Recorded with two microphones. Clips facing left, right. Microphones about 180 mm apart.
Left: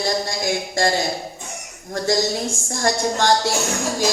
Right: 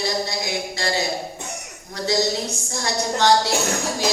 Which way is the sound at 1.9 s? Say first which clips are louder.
Left 2 dB; 50° left (ahead or behind).